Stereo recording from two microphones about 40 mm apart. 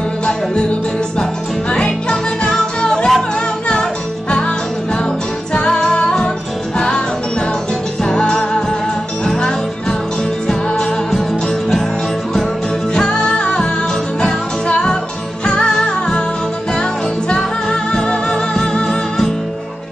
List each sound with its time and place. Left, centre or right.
1.9 s music: centre
8.0 s music: centre
12.9 s music: left
17.3 s music: centre
18.9 s music: centre